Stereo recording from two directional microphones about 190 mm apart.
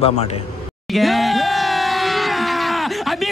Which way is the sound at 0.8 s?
Centre (ahead or behind).